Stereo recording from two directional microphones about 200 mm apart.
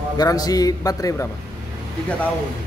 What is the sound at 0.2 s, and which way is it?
A man's voice, 20° left (ahead or behind).